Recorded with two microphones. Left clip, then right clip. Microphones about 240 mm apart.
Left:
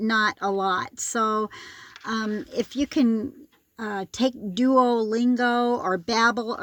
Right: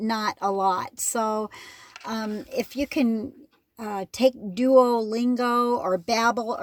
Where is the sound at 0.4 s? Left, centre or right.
Right.